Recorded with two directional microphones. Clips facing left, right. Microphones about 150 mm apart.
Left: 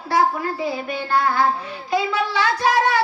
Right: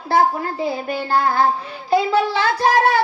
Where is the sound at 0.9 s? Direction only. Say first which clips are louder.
Right 1 dB; 35° right (ahead or behind).